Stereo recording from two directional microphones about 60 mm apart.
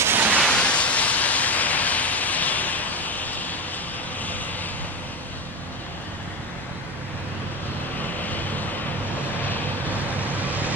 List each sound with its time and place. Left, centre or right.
0.0 s a sound: right
0.4 s vehicle: centre
8.2 s vehicle: left
9.8 s vehicle: right